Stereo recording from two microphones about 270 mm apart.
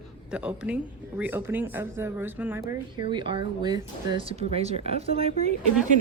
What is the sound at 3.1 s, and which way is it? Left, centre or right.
Speech, centre.